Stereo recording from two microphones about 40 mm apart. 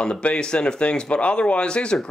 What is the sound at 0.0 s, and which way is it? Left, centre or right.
Speech, left.